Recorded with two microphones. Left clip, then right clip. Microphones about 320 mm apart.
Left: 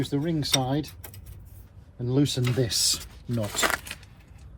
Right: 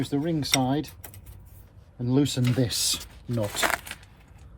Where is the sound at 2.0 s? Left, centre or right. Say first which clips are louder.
Right 1 dB; right.